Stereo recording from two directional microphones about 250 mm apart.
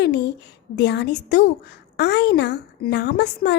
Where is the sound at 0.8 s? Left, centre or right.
Left.